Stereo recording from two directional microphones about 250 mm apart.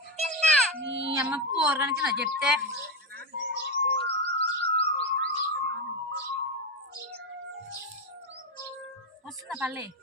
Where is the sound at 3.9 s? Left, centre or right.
Left.